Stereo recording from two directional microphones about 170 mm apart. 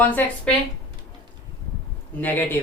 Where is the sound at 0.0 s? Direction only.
10° left (ahead or behind).